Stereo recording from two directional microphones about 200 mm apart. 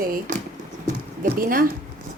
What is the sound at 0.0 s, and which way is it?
Speech, 45° right (ahead or behind).